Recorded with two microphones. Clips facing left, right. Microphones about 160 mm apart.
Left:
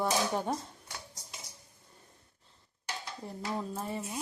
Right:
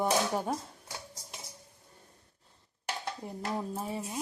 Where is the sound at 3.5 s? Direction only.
10° right (ahead or behind).